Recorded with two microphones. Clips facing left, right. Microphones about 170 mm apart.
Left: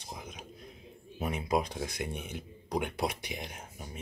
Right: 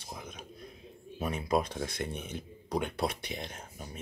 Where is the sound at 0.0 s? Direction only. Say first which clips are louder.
Even; 15° left (ahead or behind).